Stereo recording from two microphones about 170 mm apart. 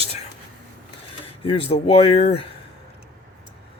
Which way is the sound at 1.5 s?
35° left (ahead or behind).